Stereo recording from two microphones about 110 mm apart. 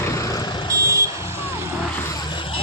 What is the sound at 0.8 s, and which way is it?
Vehicle, 30° right (ahead or behind).